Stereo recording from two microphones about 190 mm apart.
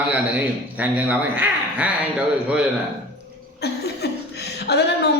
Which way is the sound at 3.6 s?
60° left (ahead or behind).